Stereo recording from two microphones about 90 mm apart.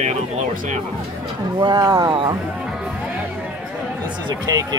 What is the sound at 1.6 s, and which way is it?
Speech, 45° right (ahead or behind).